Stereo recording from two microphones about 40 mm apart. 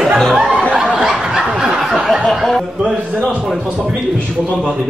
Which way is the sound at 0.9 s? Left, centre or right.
Centre.